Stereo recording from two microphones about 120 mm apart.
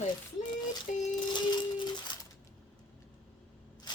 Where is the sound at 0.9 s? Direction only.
90° left.